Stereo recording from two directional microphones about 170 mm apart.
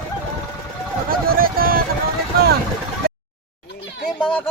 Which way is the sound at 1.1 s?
60° right (ahead or behind).